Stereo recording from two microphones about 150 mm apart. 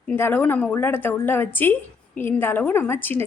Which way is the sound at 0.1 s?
15° left (ahead or behind).